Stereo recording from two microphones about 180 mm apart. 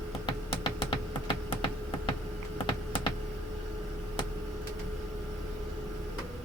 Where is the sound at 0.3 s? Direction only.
25° left (ahead or behind).